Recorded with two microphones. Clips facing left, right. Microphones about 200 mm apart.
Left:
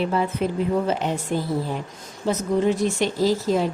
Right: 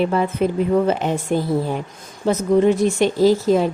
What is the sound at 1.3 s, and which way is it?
Speech, 55° right (ahead or behind).